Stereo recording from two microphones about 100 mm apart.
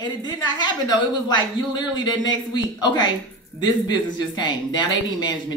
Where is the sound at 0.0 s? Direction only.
45° left (ahead or behind).